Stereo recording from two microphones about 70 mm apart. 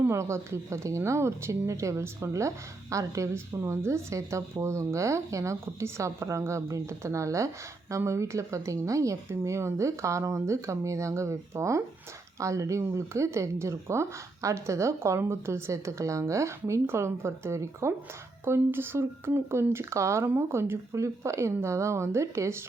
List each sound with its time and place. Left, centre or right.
0.1 s a woman's voice: right